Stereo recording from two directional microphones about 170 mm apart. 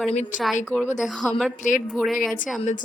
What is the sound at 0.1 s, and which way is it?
Speech, 45° left (ahead or behind).